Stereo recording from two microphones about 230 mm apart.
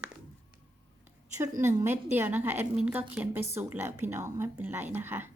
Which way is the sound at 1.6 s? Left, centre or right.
Centre.